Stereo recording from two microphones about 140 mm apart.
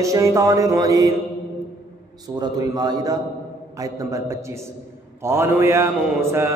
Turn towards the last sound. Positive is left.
turn(degrees=-20)  # may be behind; listen again after turning